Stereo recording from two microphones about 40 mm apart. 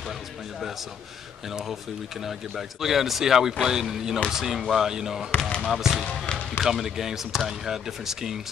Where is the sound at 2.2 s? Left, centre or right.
Centre.